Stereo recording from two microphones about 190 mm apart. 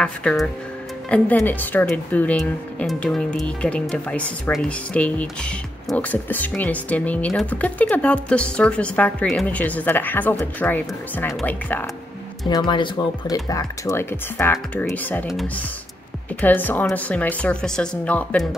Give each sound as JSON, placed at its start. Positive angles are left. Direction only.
{"t": 0.0, "sound": "speech", "side_deg": 5}
{"t": 12.4, "sound": "speech", "side_deg": 25}